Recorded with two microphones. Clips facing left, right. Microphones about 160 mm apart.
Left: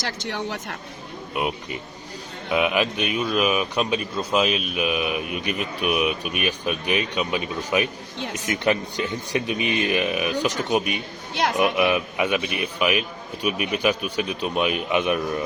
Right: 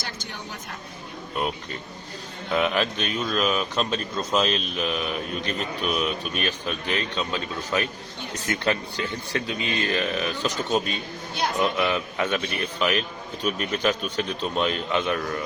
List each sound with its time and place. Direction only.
0.0 s speech: 85° left
1.4 s speech: 10° left (ahead or behind)